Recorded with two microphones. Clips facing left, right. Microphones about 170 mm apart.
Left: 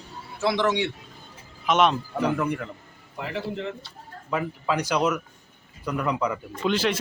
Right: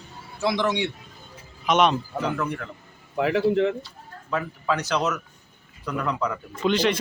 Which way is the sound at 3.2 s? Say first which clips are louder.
Right 10 dB; 90° right.